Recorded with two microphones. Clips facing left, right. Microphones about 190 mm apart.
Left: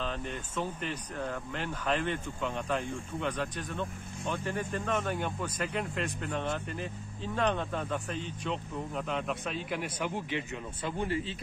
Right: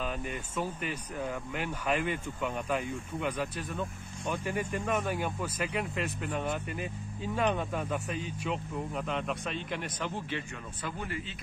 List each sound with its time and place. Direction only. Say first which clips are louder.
0.0 s speech: right 1 dB; 10° right (ahead or behind); by 10.4 s 15° left (ahead or behind)
10.8 s speech: left 5 dB; 25° left (ahead or behind)